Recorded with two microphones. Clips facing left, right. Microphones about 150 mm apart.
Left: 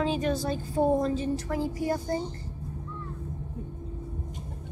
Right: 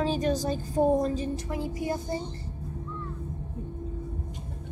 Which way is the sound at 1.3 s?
20° right (ahead or behind).